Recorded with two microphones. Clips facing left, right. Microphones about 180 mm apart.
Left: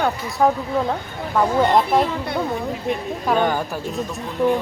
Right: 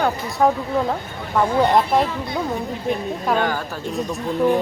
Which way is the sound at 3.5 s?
15° left (ahead or behind).